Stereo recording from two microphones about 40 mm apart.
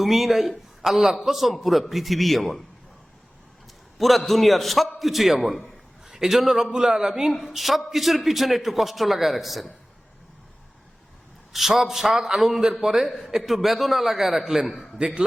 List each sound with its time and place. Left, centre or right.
0.0 s a man's voice: centre
3.9 s a man's voice: centre
11.5 s a man's voice: centre
14.4 s a man's voice: centre